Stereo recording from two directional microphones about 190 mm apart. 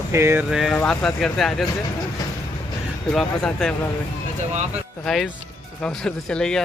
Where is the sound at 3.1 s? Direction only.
5° left (ahead or behind).